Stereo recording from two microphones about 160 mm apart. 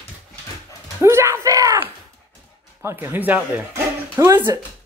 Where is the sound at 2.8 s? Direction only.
15° right (ahead or behind).